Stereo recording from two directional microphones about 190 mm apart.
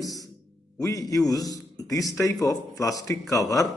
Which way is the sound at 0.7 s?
15° left (ahead or behind).